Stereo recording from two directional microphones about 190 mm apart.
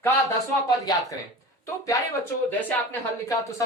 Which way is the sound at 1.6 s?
15° left (ahead or behind).